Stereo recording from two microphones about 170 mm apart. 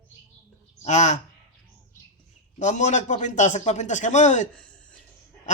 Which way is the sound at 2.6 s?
45° left (ahead or behind).